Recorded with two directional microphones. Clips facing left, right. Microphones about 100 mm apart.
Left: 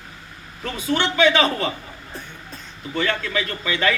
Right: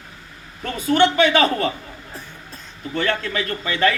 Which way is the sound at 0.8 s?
50° right (ahead or behind).